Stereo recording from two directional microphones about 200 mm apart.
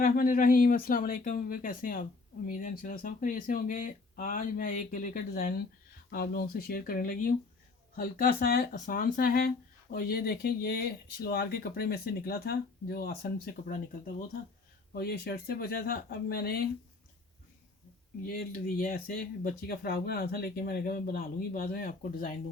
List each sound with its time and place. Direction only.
0.0 s speech: 45° left (ahead or behind)
14.9 s speech: 50° left (ahead or behind)
18.3 s speech: 45° left (ahead or behind)